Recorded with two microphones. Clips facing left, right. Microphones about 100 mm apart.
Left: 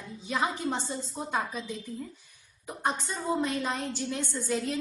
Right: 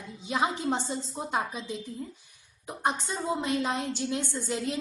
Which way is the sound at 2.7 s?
15° right (ahead or behind).